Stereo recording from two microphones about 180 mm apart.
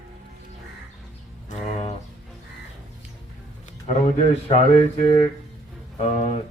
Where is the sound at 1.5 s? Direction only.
40° left (ahead or behind).